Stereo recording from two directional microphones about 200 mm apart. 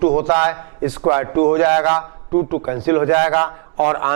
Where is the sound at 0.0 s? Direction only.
15° right (ahead or behind).